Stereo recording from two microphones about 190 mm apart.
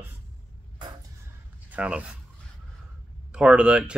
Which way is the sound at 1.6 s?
5° right (ahead or behind).